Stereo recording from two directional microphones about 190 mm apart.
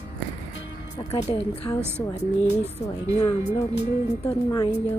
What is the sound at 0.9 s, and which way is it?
Speech, 30° left (ahead or behind).